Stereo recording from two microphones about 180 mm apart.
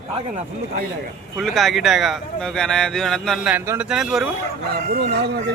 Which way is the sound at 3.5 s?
10° right (ahead or behind).